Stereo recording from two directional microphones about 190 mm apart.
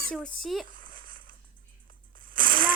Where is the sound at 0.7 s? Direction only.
45° right (ahead or behind).